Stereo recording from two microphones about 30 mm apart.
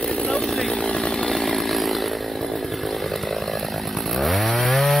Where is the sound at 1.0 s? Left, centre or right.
Left.